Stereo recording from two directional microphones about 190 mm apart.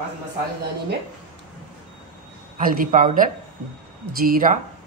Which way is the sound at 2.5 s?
45° right (ahead or behind).